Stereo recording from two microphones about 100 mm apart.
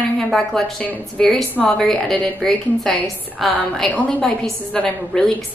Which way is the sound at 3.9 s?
15° left (ahead or behind).